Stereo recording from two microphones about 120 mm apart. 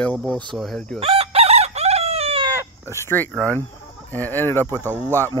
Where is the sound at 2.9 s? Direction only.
20° left (ahead or behind).